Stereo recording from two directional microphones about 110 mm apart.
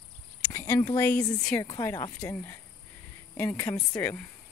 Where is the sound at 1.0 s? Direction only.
15° left (ahead or behind).